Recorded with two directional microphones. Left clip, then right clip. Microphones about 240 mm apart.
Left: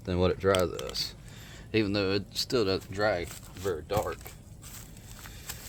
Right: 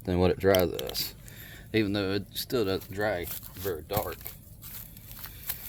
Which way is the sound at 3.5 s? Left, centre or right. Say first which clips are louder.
Left 1 dB; centre.